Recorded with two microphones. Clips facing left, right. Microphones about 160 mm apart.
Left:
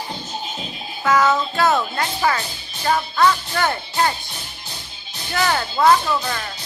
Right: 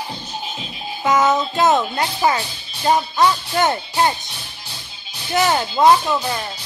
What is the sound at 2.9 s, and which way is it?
Music, 20° right (ahead or behind).